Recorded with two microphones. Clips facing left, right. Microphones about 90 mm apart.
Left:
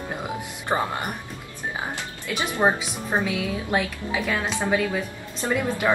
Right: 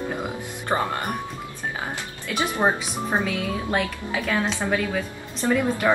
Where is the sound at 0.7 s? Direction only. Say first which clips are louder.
Even; 20° left (ahead or behind).